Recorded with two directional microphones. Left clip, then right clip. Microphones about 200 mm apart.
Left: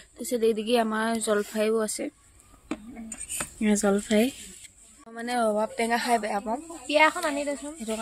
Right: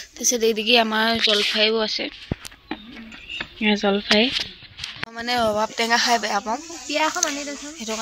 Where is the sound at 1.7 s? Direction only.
20° left (ahead or behind).